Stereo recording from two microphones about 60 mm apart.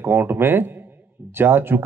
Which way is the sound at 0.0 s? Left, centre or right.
Right.